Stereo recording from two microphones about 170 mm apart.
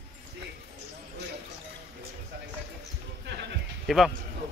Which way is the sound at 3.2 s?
80° right.